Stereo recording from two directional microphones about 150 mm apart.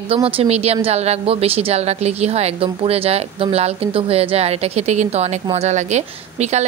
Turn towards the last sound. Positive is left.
turn(degrees=-45)  # may be behind; listen again after turning